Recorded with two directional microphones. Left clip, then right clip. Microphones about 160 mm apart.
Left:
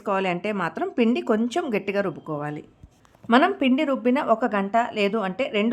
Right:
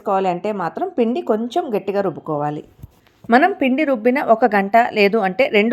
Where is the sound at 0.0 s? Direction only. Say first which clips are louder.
Right 6 dB; 5° right (ahead or behind).